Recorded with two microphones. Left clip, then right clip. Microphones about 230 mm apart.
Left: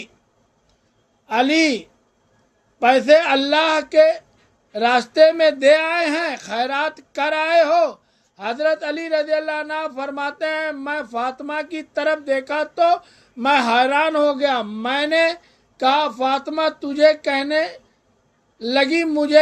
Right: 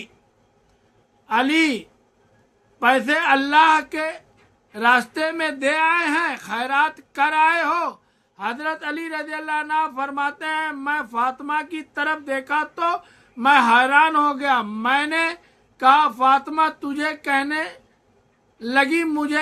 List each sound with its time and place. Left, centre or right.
1.3 s a man's voice: centre